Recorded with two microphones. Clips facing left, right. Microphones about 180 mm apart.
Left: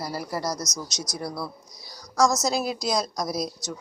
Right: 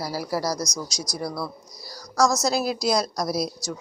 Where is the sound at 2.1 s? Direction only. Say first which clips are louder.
Right 1 dB; centre (ahead or behind).